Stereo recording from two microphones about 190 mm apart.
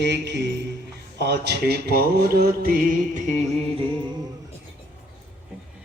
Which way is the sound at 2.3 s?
55° right (ahead or behind).